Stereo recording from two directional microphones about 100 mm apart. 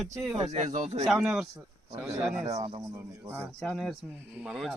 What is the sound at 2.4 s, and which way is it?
Speech, 80° right.